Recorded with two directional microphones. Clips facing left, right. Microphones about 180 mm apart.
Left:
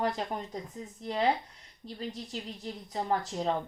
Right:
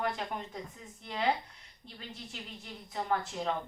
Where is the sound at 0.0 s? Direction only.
35° left (ahead or behind).